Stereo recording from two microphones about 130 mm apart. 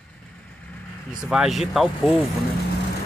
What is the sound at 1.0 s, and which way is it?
Speech, 5° right (ahead or behind).